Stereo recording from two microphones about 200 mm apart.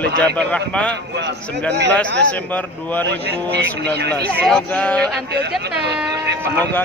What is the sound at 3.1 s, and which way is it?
Speech, 55° right (ahead or behind).